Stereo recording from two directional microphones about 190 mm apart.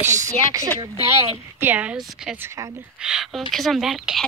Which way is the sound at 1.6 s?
10° right (ahead or behind).